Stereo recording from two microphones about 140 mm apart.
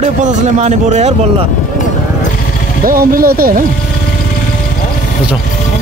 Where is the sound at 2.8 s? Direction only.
90° right.